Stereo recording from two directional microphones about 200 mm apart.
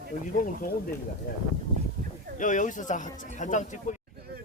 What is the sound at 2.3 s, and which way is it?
Speech, 40° left (ahead or behind).